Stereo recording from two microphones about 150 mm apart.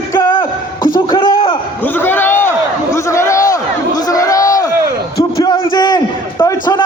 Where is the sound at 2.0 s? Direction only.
15° left (ahead or behind).